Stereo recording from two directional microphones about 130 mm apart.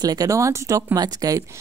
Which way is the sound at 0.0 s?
30° right (ahead or behind).